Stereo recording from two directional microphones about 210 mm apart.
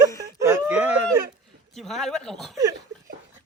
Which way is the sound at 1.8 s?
Centre (ahead or behind).